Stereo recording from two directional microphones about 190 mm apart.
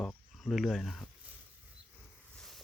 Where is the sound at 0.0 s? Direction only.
5° left (ahead or behind).